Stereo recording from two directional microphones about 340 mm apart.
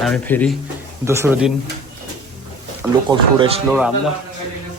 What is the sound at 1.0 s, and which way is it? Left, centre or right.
Speech, centre.